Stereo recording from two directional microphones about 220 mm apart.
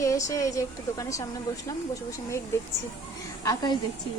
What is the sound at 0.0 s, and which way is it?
Speech, 15° left (ahead or behind).